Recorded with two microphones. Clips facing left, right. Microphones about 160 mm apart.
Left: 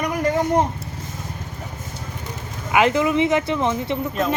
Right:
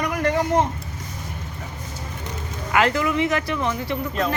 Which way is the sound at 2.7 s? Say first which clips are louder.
Left 3 dB; 20° left (ahead or behind).